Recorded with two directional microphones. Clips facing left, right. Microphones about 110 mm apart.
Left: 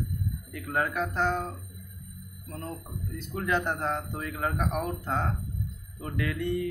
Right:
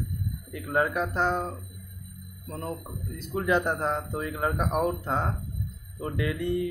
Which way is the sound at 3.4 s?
5° right (ahead or behind).